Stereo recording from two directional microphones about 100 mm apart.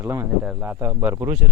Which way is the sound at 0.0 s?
25° right (ahead or behind).